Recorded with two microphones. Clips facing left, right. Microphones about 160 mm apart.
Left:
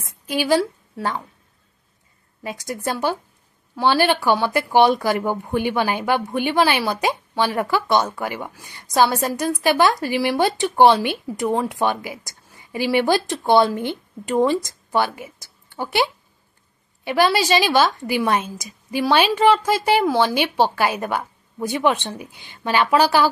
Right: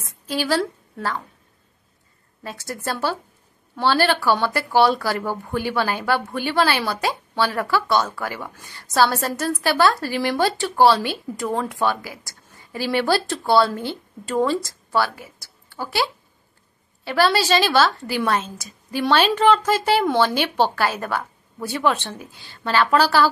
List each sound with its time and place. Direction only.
0.0 s a woman's voice: 15° left (ahead or behind)
2.4 s speech: 15° left (ahead or behind)